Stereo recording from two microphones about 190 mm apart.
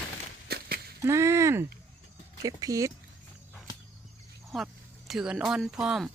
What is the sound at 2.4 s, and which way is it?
Speech, 20° right (ahead or behind).